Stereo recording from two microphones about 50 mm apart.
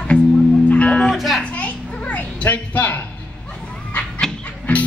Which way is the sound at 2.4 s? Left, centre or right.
Left.